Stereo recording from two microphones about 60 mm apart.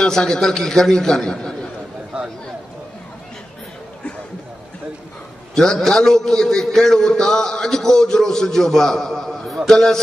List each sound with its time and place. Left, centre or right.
0.0 s a man's voice: centre
2.1 s a sound: centre
5.5 s a man's voice: centre